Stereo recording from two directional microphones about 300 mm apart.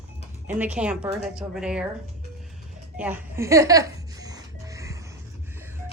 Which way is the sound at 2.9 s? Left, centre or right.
Centre.